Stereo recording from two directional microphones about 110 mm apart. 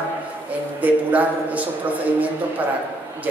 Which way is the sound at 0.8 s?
15° right (ahead or behind).